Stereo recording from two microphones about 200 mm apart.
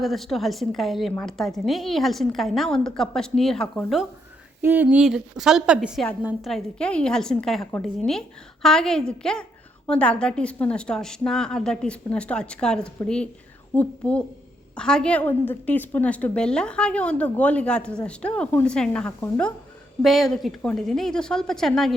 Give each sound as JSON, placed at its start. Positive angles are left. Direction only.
{"t": 0.0, "sound": "a woman's voice", "side_deg": 0}
{"t": 4.6, "sound": "a woman's voice", "side_deg": -10}